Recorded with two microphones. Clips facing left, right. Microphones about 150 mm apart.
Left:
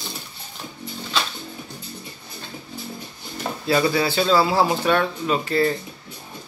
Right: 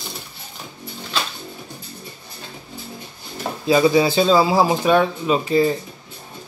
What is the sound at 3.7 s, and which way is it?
A man's voice, 15° right (ahead or behind).